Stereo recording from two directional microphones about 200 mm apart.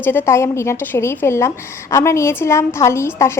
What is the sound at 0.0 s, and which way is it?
A woman's voice, 10° left (ahead or behind).